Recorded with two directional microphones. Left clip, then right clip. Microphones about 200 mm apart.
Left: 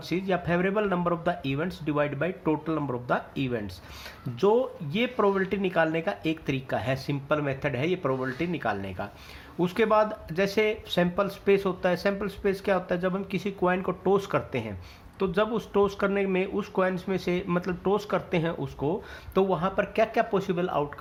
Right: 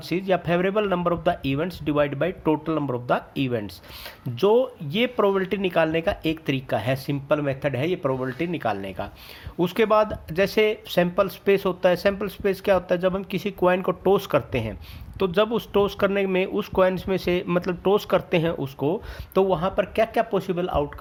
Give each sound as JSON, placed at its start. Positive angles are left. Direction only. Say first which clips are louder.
{"t": 0.1, "sound": "speech", "louder": "right 5 dB", "side_deg": -40}